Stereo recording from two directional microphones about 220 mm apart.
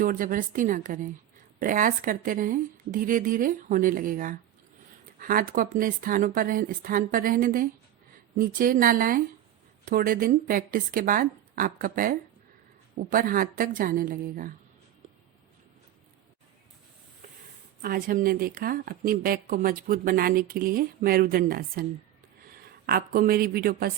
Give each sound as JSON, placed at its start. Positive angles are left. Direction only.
{"t": 0.0, "sound": "a woman's voice", "side_deg": -40}
{"t": 17.8, "sound": "a woman's voice", "side_deg": -40}